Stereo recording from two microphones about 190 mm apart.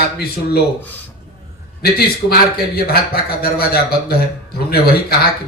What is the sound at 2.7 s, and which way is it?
A man's voice, 55° left (ahead or behind).